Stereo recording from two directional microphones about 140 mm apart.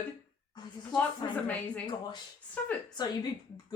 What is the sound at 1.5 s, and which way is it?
Speech, 10° left (ahead or behind).